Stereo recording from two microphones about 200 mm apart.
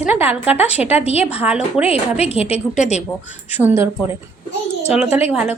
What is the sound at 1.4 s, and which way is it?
Speech, 5° right (ahead or behind).